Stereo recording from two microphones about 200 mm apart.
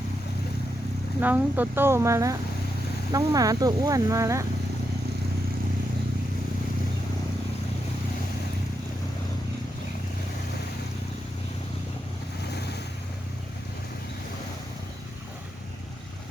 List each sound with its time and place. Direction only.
1.2 s speech: 10° right (ahead or behind)
12.5 s waves: 55° left (ahead or behind)